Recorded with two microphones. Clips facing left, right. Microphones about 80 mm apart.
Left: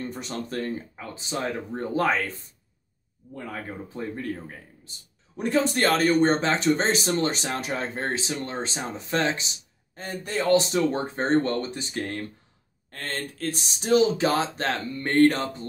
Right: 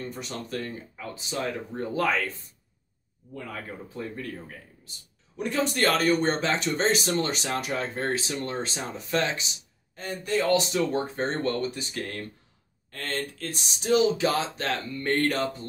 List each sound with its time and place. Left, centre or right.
0.1 s speech: left
3.3 s speech: left
13.8 s speech: left